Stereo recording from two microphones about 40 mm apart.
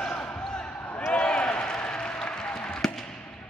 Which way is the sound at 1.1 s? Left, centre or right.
Left.